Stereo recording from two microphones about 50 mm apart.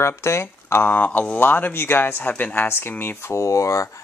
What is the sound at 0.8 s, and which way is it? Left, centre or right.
Speech, left.